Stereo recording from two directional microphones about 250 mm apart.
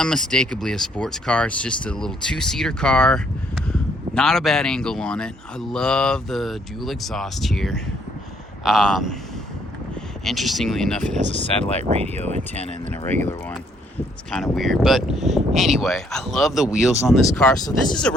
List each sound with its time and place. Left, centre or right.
0.0 s speech: centre
10.2 s speech: centre
11.8 s speech: right
13.1 s speech: centre
14.5 s speech: centre